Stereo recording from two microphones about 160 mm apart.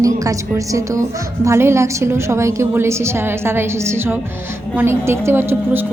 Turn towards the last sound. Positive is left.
turn(degrees=-15)  # may be behind; listen again after turning